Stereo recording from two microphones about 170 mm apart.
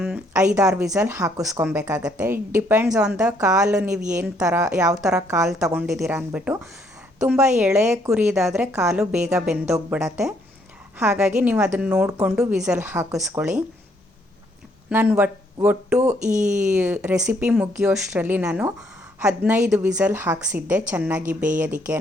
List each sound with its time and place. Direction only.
0.6 s a woman's voice: 5° right (ahead or behind)
1.1 s a woman's voice: 20° right (ahead or behind)
9.6 s speech: 15° right (ahead or behind)
10.9 s a woman's voice: 5° right (ahead or behind)
14.8 s speech: 10° right (ahead or behind)
16.2 s speech: 45° right (ahead or behind)
16.7 s a woman's voice: 5° right (ahead or behind)
21.2 s speech: 50° right (ahead or behind)